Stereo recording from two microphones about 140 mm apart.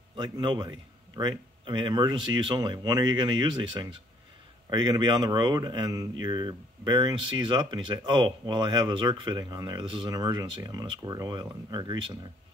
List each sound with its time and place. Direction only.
0.1 s speech: 35° right (ahead or behind)